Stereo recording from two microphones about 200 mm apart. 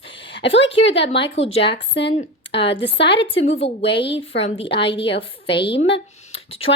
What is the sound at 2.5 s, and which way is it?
Speech, 60° left (ahead or behind).